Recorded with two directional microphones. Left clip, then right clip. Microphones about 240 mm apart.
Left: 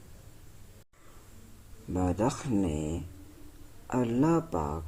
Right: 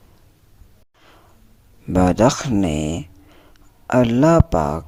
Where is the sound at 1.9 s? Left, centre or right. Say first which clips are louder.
Right 14 dB; right.